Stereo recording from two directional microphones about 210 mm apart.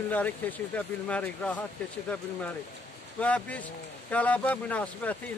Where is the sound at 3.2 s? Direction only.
5° left (ahead or behind).